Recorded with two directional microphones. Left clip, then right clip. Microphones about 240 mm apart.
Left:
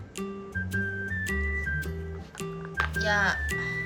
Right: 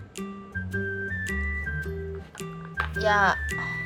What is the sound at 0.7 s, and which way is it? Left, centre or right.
Music, centre.